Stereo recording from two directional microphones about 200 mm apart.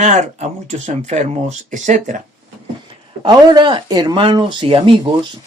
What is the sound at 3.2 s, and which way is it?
Speech, 20° right (ahead or behind).